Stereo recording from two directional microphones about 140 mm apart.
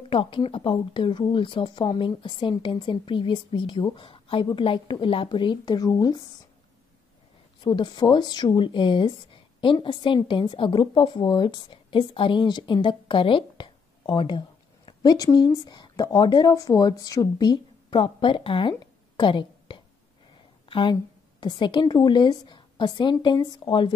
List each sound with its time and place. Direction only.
0.1 s speech: 35° left (ahead or behind)
7.6 s a woman's voice: 30° left (ahead or behind)